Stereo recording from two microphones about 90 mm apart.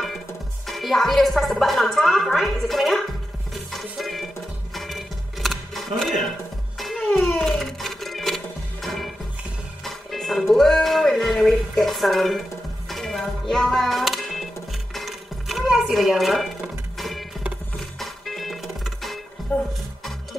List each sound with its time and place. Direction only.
0.7 s speech: centre (ahead or behind)
3.7 s music: centre (ahead or behind)
19.5 s speech: 20° left (ahead or behind)